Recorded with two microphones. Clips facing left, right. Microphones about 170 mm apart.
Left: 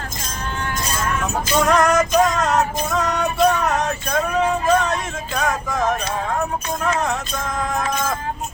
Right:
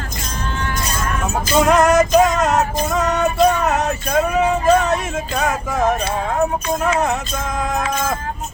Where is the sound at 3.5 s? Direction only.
5° right (ahead or behind).